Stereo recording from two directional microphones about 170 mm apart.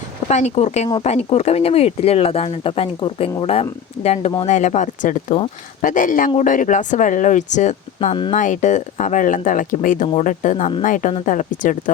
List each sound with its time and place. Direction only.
0.3 s speech: 40° left (ahead or behind)
8.1 s speech: 30° left (ahead or behind)
8.4 s speech: 45° left (ahead or behind)